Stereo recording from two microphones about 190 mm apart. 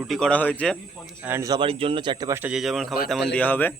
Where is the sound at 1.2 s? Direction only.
15° right (ahead or behind).